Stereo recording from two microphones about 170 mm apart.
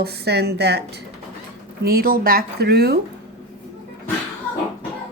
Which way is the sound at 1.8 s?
60° right (ahead or behind).